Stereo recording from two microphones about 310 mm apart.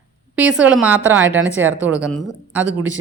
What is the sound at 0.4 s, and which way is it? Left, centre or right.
Speech, centre.